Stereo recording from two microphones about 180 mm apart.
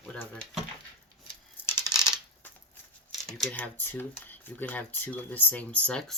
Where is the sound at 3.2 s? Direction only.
5° left (ahead or behind).